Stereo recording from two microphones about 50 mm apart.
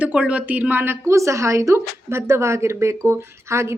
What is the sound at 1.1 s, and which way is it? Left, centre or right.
A woman's voice, right.